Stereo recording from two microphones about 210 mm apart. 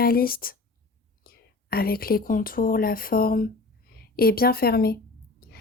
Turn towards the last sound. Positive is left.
turn(degrees=45)  # may be behind; listen again after turning